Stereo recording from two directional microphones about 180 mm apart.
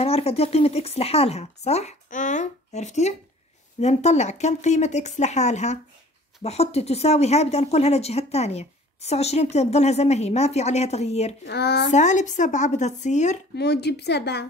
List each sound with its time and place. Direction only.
0.0 s speech: 35° left (ahead or behind)
11.4 s a woman's voice: 65° left (ahead or behind)
11.9 s speech: 45° left (ahead or behind)
13.6 s a woman's voice: 65° left (ahead or behind)